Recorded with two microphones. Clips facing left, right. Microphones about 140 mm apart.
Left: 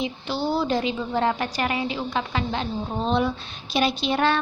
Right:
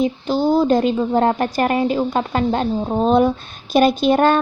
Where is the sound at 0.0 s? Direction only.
45° right (ahead or behind).